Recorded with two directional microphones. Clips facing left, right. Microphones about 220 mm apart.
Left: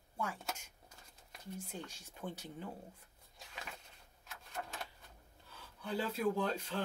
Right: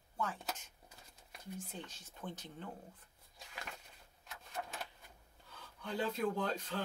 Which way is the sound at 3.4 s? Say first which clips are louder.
Even; centre (ahead or behind).